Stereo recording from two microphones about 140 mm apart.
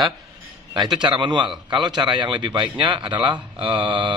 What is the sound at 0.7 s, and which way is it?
Speech, 35° right (ahead or behind).